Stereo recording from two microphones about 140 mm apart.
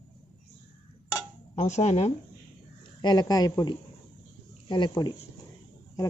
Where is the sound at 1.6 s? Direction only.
55° left (ahead or behind).